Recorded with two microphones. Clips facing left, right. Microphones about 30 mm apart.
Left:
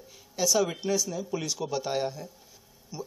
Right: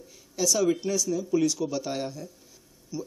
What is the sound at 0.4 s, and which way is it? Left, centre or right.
Speech, centre.